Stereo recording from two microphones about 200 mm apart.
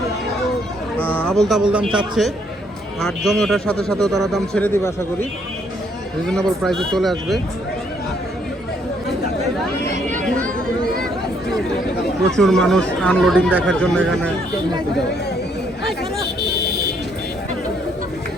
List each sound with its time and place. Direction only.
0.9 s a man's voice: 10° left (ahead or behind)
6.2 s a man's voice: centre (ahead or behind)
9.9 s chatter: 40° right (ahead or behind)
12.4 s a man's voice: centre (ahead or behind)